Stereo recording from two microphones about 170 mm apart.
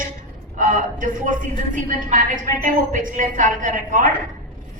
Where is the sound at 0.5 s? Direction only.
50° right (ahead or behind).